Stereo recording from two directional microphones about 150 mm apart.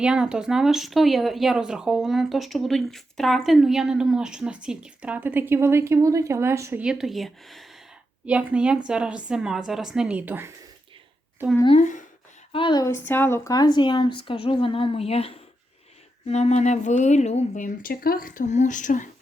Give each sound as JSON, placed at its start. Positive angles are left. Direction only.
{"t": 0.0, "sound": "speech", "side_deg": -5}
{"t": 6.8, "sound": "speech", "side_deg": 0}
{"t": 11.8, "sound": "speech", "side_deg": 55}
{"t": 12.5, "sound": "speech", "side_deg": 35}
{"t": 12.8, "sound": "a woman's voice", "side_deg": 15}